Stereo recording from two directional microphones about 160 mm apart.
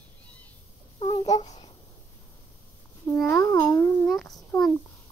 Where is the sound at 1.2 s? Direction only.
25° left (ahead or behind).